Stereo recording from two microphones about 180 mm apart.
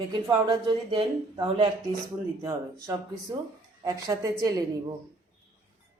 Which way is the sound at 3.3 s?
15° right (ahead or behind).